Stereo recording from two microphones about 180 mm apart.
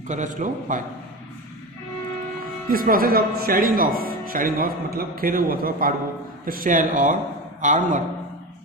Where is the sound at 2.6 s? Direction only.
50° right (ahead or behind).